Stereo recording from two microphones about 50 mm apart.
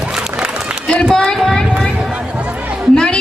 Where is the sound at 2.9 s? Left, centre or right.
Centre.